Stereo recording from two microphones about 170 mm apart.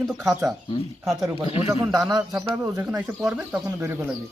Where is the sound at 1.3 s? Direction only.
20° right (ahead or behind).